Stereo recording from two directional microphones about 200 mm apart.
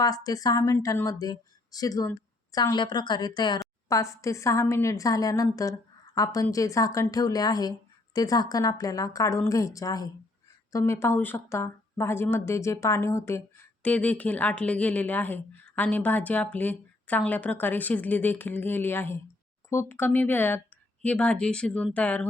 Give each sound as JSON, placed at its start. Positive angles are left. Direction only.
{"t": 0.0, "sound": "speech", "side_deg": 20}